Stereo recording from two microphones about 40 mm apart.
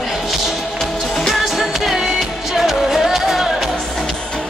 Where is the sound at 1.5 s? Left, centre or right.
Centre.